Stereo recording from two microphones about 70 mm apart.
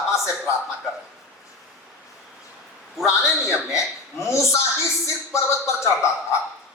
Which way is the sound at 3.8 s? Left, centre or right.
Left.